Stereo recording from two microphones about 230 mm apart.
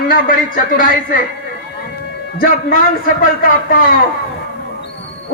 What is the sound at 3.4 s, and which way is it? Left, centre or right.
Speech, left.